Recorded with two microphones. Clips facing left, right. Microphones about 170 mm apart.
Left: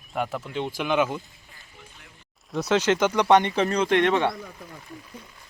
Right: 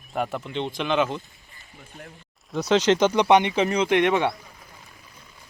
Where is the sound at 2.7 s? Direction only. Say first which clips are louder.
Right 3 dB; 20° right (ahead or behind).